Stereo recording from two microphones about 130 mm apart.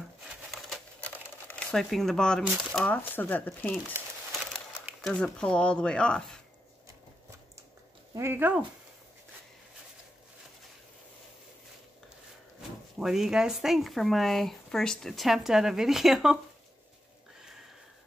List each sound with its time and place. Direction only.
1.7 s speech: centre (ahead or behind)
5.0 s speech: 5° left (ahead or behind)
8.1 s speech: 20° right (ahead or behind)
13.0 s speech: 5° right (ahead or behind)
17.4 s sniff: 5° right (ahead or behind)